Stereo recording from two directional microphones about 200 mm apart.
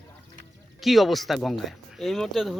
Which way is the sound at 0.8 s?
Centre (ahead or behind).